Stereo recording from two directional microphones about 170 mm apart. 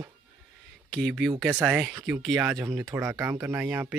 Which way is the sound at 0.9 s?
Centre (ahead or behind).